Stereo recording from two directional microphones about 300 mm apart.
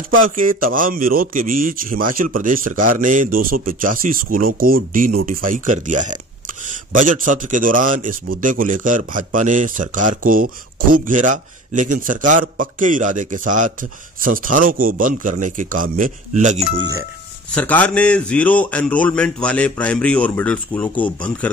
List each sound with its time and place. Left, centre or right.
0.2 s speech: right
17.5 s speech: centre